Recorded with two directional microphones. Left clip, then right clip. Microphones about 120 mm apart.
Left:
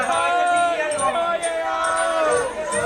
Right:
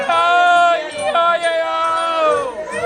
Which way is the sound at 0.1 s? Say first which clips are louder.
Right 9 dB; 45° right (ahead or behind).